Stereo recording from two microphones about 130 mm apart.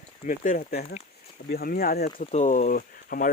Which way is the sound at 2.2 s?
60° left (ahead or behind).